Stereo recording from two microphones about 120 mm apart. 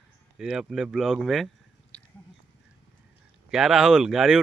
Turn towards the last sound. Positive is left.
turn(degrees=0)  # may be behind; listen again after turning